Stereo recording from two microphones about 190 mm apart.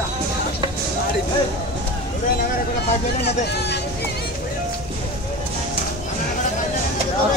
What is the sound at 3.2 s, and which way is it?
Speech, 60° left (ahead or behind).